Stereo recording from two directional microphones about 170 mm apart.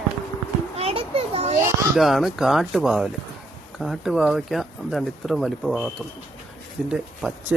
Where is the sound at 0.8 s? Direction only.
35° right (ahead or behind).